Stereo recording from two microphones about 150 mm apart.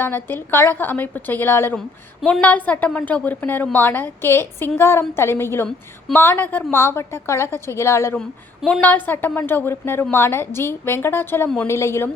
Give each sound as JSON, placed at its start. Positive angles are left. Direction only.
{"t": 0.0, "sound": "a woman's voice", "side_deg": 15}
{"t": 8.2, "sound": "a woman's voice", "side_deg": 5}